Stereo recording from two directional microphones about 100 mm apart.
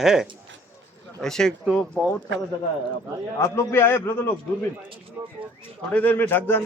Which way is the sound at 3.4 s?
25° left (ahead or behind).